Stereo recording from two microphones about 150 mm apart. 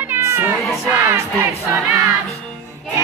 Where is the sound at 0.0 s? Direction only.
15° right (ahead or behind).